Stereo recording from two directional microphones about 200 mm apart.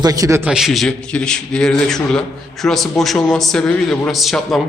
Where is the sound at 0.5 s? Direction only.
Centre (ahead or behind).